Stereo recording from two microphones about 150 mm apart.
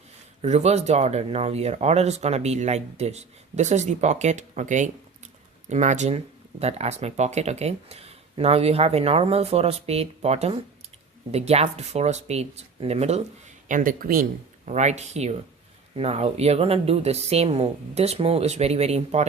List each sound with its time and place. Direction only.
0.4 s speech: 45° right (ahead or behind)
13.7 s speech: 60° right (ahead or behind)
14.7 s speech: 50° right (ahead or behind)